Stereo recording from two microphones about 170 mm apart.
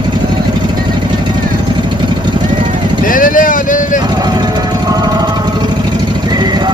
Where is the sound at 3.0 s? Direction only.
55° left (ahead or behind).